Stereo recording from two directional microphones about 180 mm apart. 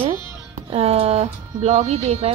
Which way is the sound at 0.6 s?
30° right (ahead or behind).